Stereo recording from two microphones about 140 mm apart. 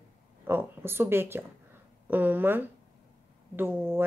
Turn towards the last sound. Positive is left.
turn(degrees=-15)  # may be behind; listen again after turning